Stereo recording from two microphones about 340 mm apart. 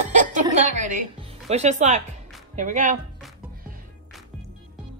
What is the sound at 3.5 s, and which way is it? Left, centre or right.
Music, right.